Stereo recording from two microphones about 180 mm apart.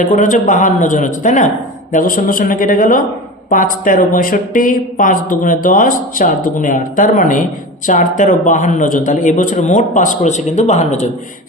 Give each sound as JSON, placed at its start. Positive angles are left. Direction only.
{"t": 0.0, "sound": "speech", "side_deg": 45}